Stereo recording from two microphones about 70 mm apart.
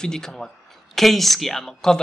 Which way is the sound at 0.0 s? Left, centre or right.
Centre.